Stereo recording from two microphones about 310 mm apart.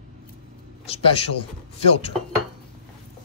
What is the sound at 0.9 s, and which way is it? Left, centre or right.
Speech, centre.